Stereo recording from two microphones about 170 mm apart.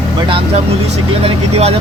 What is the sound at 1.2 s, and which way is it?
Speech, 40° right (ahead or behind).